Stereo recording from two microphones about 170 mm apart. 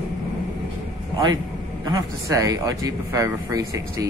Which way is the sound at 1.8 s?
20° right (ahead or behind).